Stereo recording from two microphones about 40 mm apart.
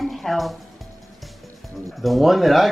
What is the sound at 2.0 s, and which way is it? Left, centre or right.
Speech, centre.